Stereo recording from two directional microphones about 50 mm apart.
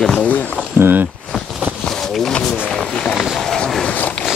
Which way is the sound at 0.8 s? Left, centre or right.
Right.